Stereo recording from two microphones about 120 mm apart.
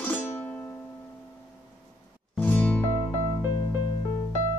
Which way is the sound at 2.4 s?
15° left (ahead or behind).